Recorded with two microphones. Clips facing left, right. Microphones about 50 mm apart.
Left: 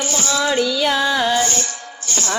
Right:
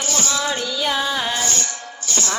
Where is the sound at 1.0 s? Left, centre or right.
Centre.